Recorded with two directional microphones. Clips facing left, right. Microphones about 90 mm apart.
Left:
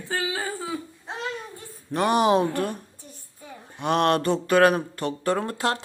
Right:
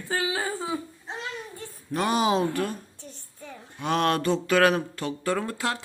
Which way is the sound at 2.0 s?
55° left (ahead or behind).